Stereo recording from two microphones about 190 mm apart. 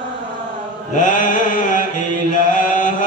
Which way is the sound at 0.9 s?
40° left (ahead or behind).